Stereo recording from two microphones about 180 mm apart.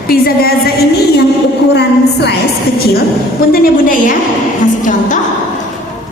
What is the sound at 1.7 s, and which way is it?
Speech, 70° left (ahead or behind).